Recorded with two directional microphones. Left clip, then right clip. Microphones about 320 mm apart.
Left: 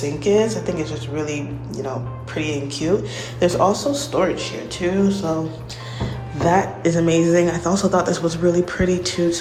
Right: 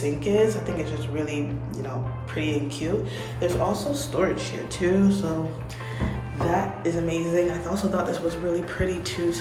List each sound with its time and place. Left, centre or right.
0.3 s speech: centre
6.5 s speech: left